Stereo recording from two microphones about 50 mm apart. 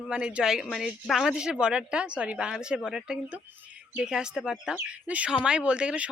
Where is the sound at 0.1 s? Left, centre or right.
Centre.